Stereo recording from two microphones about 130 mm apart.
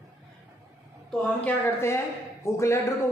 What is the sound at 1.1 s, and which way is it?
A man's voice, 15° left (ahead or behind).